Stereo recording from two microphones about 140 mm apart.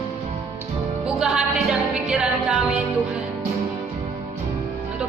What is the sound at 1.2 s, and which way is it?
Music, 5° right (ahead or behind).